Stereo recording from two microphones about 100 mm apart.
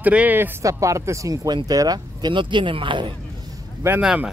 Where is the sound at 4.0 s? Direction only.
10° right (ahead or behind).